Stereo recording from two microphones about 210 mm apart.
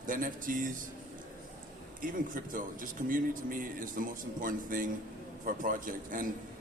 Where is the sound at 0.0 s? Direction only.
40° right (ahead or behind).